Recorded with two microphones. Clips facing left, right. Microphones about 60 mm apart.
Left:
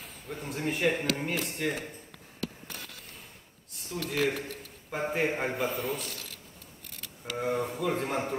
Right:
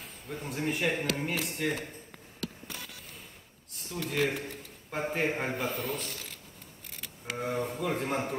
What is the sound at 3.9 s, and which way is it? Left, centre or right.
Speech, centre.